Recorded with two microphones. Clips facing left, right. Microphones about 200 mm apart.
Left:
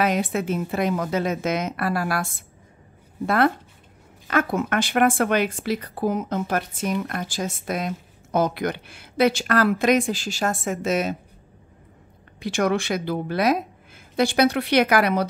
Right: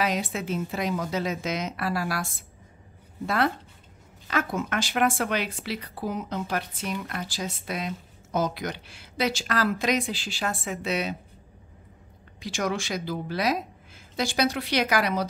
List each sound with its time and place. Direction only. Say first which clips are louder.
0.0 s a woman's voice: left 5 dB; 55° left (ahead or behind)
12.4 s a woman's voice: left 6 dB; 60° left (ahead or behind)